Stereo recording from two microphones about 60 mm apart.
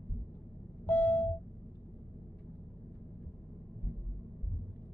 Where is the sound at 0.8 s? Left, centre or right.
Left.